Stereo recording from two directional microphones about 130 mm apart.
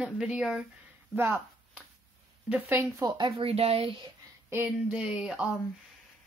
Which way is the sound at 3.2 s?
50° right (ahead or behind).